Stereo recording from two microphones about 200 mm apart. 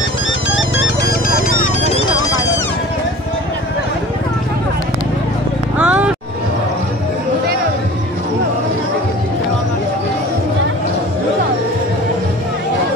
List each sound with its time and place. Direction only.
0.6 s music: 70° left (ahead or behind)
1.5 s a sound: 40° left (ahead or behind)
5.8 s music: 5° right (ahead or behind)